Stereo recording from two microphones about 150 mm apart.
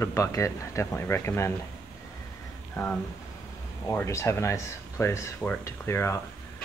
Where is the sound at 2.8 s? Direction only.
20° left (ahead or behind).